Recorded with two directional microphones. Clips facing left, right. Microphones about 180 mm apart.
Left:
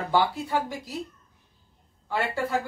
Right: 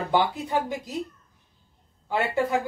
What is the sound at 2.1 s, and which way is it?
Speech, 15° right (ahead or behind).